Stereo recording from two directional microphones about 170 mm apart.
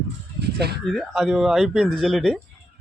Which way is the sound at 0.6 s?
70° right (ahead or behind).